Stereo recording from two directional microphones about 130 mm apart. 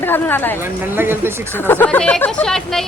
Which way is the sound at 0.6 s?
15° right (ahead or behind).